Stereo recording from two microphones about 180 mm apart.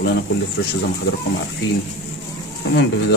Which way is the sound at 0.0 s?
70° left (ahead or behind).